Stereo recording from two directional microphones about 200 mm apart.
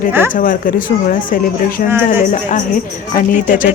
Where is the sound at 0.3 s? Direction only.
45° left (ahead or behind).